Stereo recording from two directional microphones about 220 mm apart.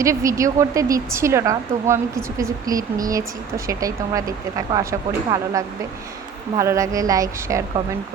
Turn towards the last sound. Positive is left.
turn(degrees=-15)  # may be behind; listen again after turning